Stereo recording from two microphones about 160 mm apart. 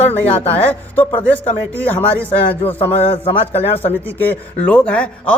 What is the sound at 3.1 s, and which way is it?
Speech, 35° left (ahead or behind).